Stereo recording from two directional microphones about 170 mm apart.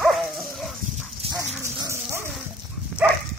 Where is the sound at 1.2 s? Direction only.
35° right (ahead or behind).